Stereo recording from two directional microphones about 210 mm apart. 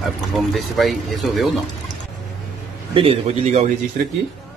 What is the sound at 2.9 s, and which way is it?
Speech, 30° right (ahead or behind).